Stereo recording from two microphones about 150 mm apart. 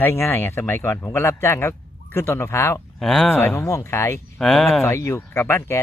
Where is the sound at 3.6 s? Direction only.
20° left (ahead or behind).